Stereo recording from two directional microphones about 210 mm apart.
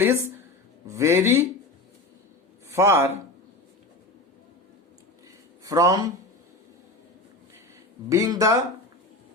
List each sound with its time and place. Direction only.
0.0 s speech: 10° right (ahead or behind)
2.6 s speech: 10° right (ahead or behind)
5.6 s speech: 15° right (ahead or behind)
8.1 s speech: 15° right (ahead or behind)